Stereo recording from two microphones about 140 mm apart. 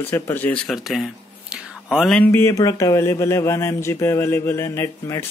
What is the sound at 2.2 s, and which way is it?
Speech, 15° left (ahead or behind).